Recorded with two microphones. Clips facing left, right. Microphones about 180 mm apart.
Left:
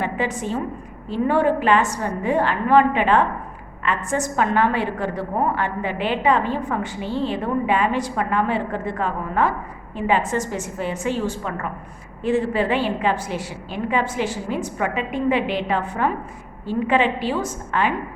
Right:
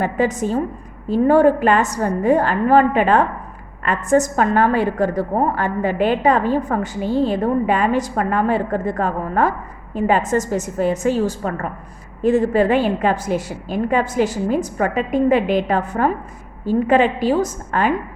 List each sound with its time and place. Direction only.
0.0 s a woman's voice: 40° right (ahead or behind)